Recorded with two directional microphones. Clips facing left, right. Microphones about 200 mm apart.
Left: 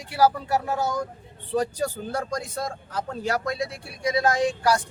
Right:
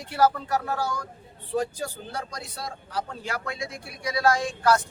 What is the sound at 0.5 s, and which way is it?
Speech, 15° left (ahead or behind).